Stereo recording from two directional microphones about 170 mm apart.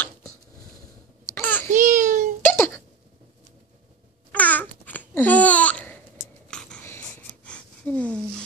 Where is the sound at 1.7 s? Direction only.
50° right (ahead or behind).